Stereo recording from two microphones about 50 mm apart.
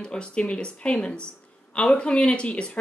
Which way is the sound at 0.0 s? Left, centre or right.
Centre.